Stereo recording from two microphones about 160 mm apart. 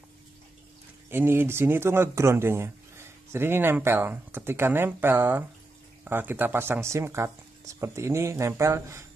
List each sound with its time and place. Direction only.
1.1 s speech: 15° right (ahead or behind)